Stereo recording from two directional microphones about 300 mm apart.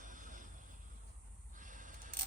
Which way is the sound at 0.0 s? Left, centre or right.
Right.